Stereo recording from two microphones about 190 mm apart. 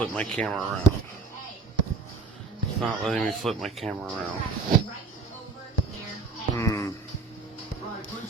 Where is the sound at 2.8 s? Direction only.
Centre (ahead or behind).